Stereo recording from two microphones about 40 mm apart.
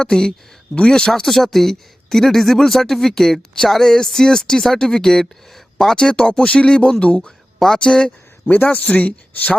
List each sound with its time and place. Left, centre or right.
0.0 s speech: centre
1.2 s speech: centre
6.1 s speech: left
7.3 s a sound: centre
7.8 s speech: left
8.4 s speech: left